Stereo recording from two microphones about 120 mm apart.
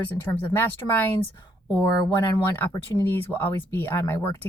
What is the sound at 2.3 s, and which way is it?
Speech, 25° left (ahead or behind).